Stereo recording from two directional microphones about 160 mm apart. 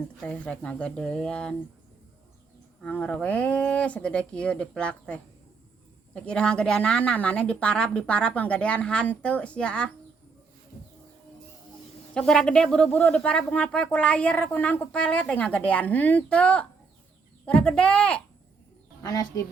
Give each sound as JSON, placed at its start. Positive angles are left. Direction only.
{"t": 0.2, "sound": "speech", "side_deg": 5}
{"t": 2.8, "sound": "speech", "side_deg": 10}
{"t": 12.1, "sound": "speech", "side_deg": 5}
{"t": 19.0, "sound": "speech", "side_deg": 25}